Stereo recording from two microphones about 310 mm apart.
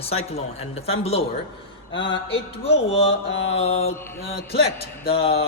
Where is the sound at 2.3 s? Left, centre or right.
Centre.